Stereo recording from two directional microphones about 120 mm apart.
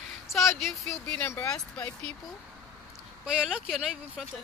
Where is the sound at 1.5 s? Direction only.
10° left (ahead or behind).